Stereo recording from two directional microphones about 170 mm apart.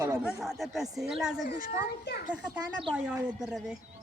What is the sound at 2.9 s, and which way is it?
Speech, 10° right (ahead or behind).